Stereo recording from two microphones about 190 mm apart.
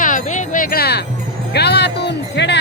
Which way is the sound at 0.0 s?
40° left (ahead or behind).